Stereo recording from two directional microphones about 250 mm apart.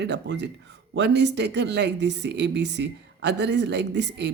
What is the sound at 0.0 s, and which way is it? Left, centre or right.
Speech, right.